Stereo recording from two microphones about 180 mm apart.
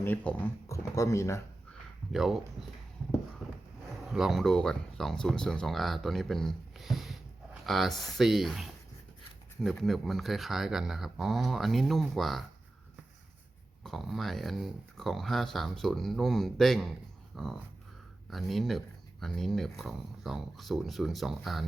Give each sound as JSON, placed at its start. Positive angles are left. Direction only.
{"t": 0.0, "sound": "speech", "side_deg": 10}
{"t": 2.1, "sound": "speech", "side_deg": 0}
{"t": 3.4, "sound": "a sound", "side_deg": 5}
{"t": 4.1, "sound": "speech", "side_deg": 0}
{"t": 13.8, "sound": "speech", "side_deg": 0}
{"t": 17.3, "sound": "dog", "side_deg": 0}
{"t": 18.3, "sound": "speech", "side_deg": 0}